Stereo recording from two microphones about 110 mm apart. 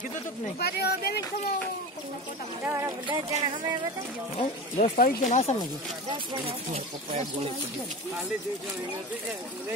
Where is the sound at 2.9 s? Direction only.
45° right (ahead or behind).